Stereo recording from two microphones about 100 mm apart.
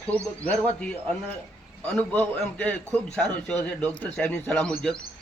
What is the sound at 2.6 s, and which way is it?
A man's voice, 15° left (ahead or behind).